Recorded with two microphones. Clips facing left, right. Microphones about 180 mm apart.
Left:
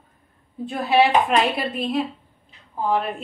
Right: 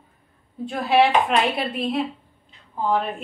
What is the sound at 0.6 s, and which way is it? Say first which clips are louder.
A woman's voice: even; centre (ahead or behind).